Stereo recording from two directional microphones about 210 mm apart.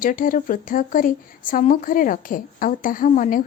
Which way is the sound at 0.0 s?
40° left (ahead or behind).